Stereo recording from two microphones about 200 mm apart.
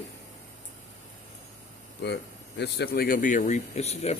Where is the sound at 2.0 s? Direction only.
60° left (ahead or behind).